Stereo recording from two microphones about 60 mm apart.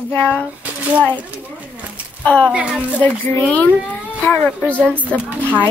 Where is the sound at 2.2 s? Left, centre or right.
Centre.